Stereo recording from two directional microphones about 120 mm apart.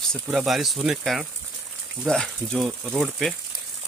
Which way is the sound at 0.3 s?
5° right (ahead or behind).